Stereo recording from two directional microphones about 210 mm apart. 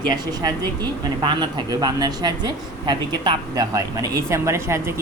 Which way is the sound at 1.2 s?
20° right (ahead or behind).